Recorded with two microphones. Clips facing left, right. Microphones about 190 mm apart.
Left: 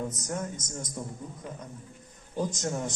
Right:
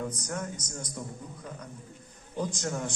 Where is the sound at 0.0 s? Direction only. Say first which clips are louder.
Left 1 dB; 20° left (ahead or behind).